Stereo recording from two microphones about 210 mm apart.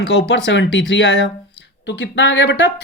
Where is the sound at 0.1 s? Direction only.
55° left (ahead or behind).